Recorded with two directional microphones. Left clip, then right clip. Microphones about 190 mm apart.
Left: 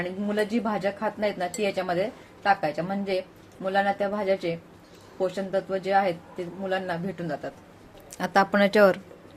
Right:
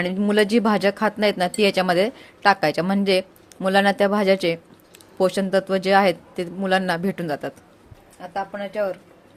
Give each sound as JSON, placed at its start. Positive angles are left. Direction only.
{"t": 0.0, "sound": "speech", "side_deg": -55}
{"t": 8.2, "sound": "speech", "side_deg": 50}